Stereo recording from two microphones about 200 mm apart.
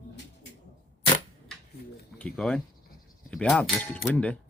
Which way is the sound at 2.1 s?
5° left (ahead or behind).